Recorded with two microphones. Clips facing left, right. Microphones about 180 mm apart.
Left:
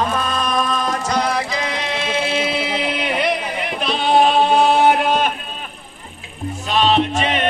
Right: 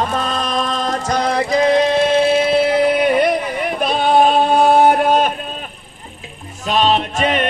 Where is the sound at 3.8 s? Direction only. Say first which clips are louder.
Right 2 dB; 50° right (ahead or behind).